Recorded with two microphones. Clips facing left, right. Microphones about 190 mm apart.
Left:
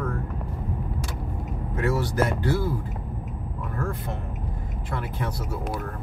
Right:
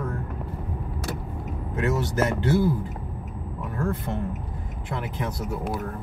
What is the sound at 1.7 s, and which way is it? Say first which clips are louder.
Speech: even; 20° right (ahead or behind).